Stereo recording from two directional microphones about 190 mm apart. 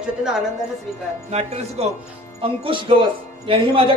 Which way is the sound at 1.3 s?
35° right (ahead or behind).